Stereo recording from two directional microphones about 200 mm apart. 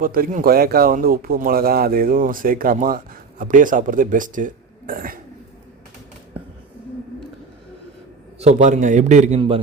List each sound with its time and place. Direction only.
0.0 s speech: 45° right (ahead or behind)
8.4 s a man's voice: 35° right (ahead or behind)